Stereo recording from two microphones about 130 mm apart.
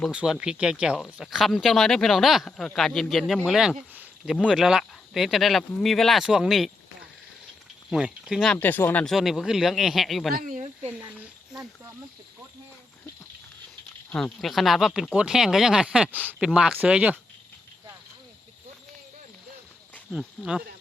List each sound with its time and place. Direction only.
0.1 s speech: 5° right (ahead or behind)
7.9 s speech: 5° right (ahead or behind)
8.6 s speech: 15° left (ahead or behind)
9.0 s speech: centre (ahead or behind)
10.3 s speech: 90° right
10.8 s a sound: 10° right (ahead or behind)
14.1 s speech: 10° left (ahead or behind); by 17.2 s 10° right (ahead or behind)
20.1 s speech: 5° right (ahead or behind)